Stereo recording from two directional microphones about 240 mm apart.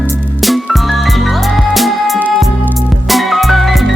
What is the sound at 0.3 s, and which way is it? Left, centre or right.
Music, centre.